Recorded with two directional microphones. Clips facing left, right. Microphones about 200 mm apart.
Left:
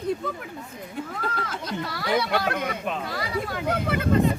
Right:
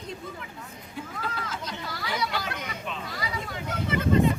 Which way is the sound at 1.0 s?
55° left (ahead or behind).